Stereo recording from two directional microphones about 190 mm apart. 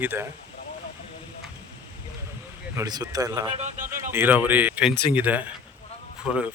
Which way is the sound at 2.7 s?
20° right (ahead or behind).